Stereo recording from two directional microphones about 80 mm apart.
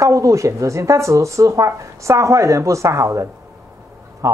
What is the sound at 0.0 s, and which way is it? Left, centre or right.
Speech, right.